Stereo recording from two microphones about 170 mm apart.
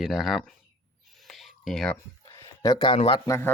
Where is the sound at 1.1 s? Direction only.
Centre (ahead or behind).